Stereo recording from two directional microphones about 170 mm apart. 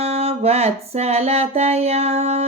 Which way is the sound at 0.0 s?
35° right (ahead or behind).